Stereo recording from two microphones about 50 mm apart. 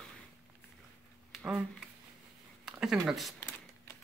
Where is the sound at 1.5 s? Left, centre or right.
Centre.